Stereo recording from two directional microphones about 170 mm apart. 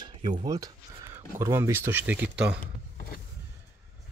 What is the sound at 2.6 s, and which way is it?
Power windows, 55° left (ahead or behind).